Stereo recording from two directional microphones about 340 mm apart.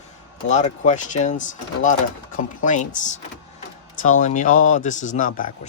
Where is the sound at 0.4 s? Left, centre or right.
Left.